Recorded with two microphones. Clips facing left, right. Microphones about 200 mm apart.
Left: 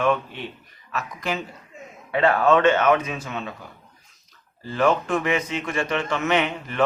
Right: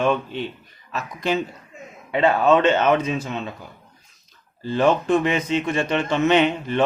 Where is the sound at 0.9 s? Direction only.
25° right (ahead or behind).